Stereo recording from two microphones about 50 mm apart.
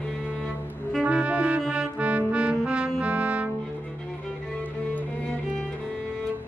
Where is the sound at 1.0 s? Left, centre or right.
Right.